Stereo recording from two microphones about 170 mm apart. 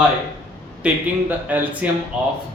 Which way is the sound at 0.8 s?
5° right (ahead or behind).